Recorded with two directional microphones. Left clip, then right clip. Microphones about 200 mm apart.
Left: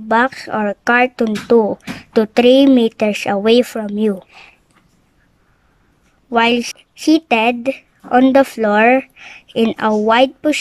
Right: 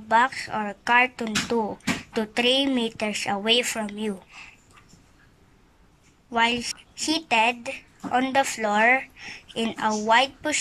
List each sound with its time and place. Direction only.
0.1 s speech: 55° left (ahead or behind)
6.3 s speech: 55° left (ahead or behind)